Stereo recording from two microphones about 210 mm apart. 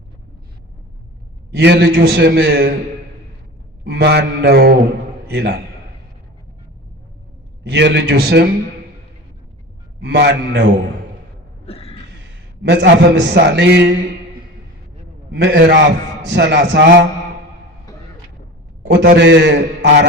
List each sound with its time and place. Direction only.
1.5 s a man's voice: 55° right (ahead or behind)
3.8 s a man's voice: 50° right (ahead or behind)
7.6 s a man's voice: 55° right (ahead or behind)
10.0 s a man's voice: 55° right (ahead or behind)
11.6 s a sound: 25° left (ahead or behind)
12.2 s a man's voice: 55° right (ahead or behind)
15.3 s a man's voice: 55° right (ahead or behind)
18.9 s a man's voice: 50° right (ahead or behind)